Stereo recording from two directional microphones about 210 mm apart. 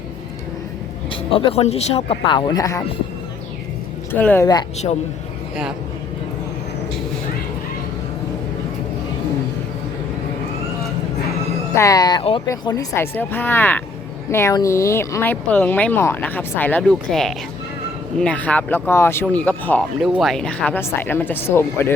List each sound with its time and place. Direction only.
1.1 s speech: 25° left (ahead or behind)
4.1 s speech: 10° left (ahead or behind)
11.7 s speech: 15° left (ahead or behind)
20.0 s speech: 5° right (ahead or behind)